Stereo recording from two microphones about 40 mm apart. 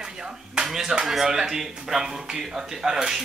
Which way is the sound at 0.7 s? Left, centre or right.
Centre.